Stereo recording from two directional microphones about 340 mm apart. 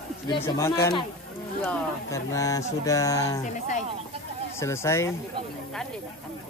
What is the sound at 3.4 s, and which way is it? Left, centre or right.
Speech, left.